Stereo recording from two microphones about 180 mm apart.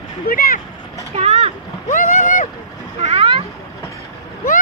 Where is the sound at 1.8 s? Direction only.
45° left (ahead or behind).